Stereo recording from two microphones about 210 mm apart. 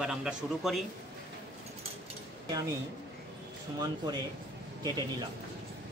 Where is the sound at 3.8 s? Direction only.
20° right (ahead or behind).